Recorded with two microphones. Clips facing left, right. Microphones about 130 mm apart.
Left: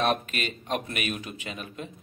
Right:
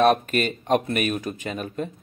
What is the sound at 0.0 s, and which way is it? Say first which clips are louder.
Speech: right 8 dB; 45° right (ahead or behind).